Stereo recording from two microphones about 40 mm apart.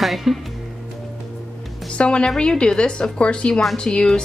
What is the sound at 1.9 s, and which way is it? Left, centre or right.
A woman's voice, left.